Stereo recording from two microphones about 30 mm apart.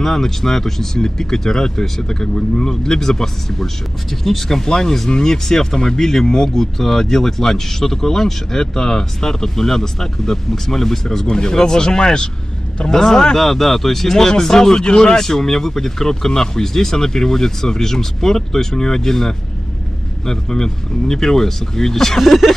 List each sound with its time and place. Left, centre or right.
0.0 s speech: centre
11.2 s speech: left
12.9 s speech: centre
22.2 s a sound: centre